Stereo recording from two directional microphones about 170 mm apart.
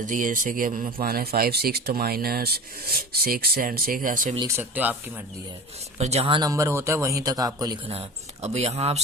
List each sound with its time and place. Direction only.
0.0 s speech: 50° right (ahead or behind)
1.0 s speech: 65° right (ahead or behind)
4.4 s speech: 15° right (ahead or behind)
6.0 s speech: 40° right (ahead or behind); by 7.8 s 20° right (ahead or behind)
7.9 s speech: 35° right (ahead or behind)